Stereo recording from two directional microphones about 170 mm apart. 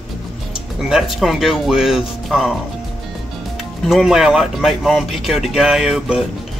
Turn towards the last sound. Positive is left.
turn(degrees=-5)  # may be behind; listen again after turning